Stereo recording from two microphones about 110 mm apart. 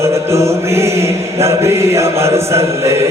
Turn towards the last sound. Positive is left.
turn(degrees=-25)  # may be behind; listen again after turning